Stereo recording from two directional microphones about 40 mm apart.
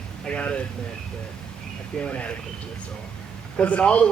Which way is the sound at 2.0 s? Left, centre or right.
Left.